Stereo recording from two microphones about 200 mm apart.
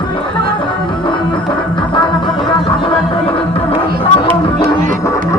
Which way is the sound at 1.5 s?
25° left (ahead or behind).